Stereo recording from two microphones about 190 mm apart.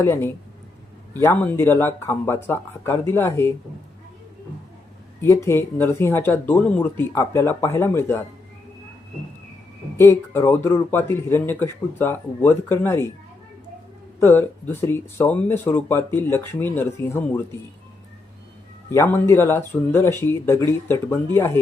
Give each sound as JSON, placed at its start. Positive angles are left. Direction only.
{"t": 0.0, "sound": "speech", "side_deg": 15}
{"t": 5.2, "sound": "speech", "side_deg": 15}
{"t": 10.0, "sound": "speech", "side_deg": 15}
{"t": 14.2, "sound": "speech", "side_deg": 10}
{"t": 18.9, "sound": "speech", "side_deg": 10}